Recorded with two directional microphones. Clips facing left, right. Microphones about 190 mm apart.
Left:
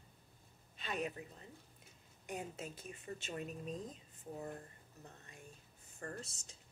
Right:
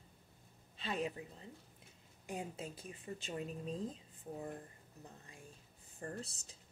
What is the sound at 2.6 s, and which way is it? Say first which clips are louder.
Speech: right 1 dB; 30° right (ahead or behind).